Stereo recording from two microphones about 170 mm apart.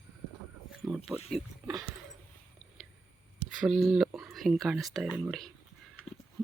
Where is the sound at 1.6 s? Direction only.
20° right (ahead or behind).